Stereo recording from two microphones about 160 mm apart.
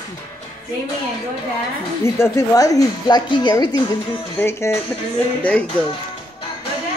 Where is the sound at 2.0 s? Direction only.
15° left (ahead or behind).